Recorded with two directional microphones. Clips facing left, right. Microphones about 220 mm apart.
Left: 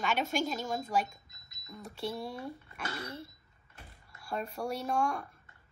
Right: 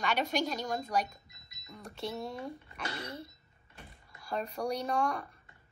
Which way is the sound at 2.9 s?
25° right (ahead or behind).